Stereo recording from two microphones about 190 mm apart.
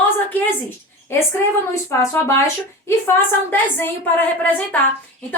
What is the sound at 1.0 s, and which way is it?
A child's voice, 15° left (ahead or behind).